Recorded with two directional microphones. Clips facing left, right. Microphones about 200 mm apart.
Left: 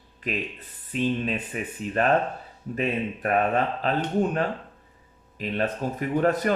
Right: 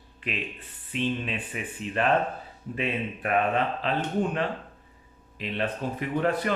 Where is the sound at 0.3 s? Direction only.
40° left (ahead or behind).